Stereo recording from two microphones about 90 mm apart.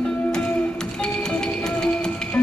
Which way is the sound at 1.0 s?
10° left (ahead or behind).